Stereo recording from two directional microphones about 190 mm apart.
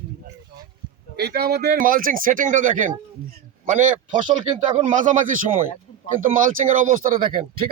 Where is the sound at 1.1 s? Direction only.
55° right (ahead or behind).